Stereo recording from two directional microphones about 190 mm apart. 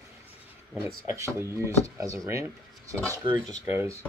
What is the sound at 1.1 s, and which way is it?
Speech, 15° right (ahead or behind).